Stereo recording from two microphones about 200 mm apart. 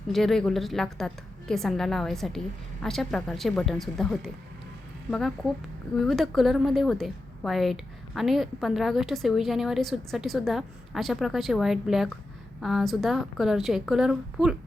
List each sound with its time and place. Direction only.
0.1 s a woman's voice: centre (ahead or behind)